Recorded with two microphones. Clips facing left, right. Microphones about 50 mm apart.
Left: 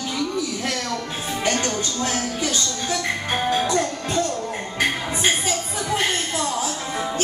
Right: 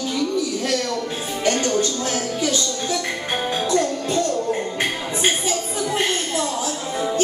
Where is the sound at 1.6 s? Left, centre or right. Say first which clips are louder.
Right 5 dB; left.